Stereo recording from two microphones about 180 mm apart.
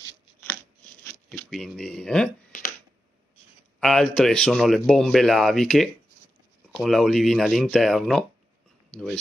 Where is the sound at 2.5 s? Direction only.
50° left (ahead or behind).